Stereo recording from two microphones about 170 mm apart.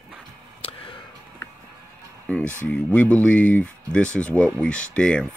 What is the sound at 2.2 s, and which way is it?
Speech, 5° left (ahead or behind).